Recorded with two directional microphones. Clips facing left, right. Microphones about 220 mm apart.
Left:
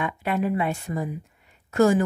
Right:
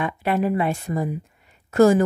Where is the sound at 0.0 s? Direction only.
40° right (ahead or behind).